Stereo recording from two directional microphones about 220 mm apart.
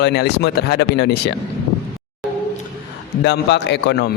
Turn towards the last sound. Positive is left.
turn(degrees=50)  # may be behind; listen again after turning